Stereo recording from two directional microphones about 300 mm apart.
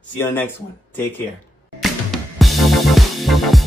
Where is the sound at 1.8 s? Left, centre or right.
Centre.